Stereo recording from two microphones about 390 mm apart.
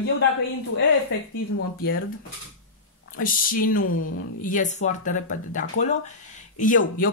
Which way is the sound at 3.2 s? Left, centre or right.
Left.